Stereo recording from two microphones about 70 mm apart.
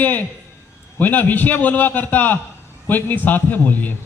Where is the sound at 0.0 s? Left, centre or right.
Left.